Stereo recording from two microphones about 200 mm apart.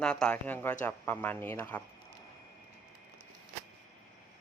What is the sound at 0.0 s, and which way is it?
Speech, 5° left (ahead or behind).